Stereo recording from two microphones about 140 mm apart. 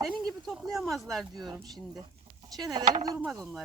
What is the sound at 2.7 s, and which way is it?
Speech, 30° right (ahead or behind).